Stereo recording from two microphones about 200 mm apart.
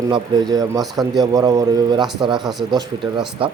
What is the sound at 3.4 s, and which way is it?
Speech, 25° right (ahead or behind).